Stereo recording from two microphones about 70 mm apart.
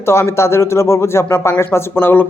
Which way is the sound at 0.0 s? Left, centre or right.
Left.